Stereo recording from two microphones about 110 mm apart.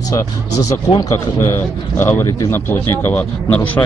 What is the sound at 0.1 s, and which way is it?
Speech, 30° left (ahead or behind).